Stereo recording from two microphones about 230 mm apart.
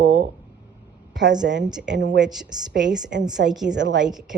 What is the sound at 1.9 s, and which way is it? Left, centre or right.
Speech, right.